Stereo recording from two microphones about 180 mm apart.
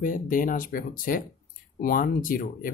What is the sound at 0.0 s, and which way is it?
Speech, 50° left (ahead or behind).